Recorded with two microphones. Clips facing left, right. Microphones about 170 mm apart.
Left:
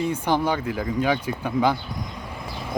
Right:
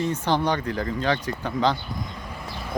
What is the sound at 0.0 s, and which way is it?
Speech, 10° left (ahead or behind).